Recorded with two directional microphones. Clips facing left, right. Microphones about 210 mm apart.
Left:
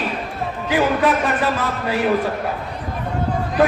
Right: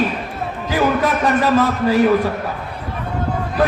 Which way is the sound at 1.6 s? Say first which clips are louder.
Right 6 dB; 40° right (ahead or behind).